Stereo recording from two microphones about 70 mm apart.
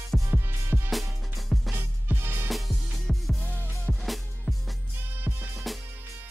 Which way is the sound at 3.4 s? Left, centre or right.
Left.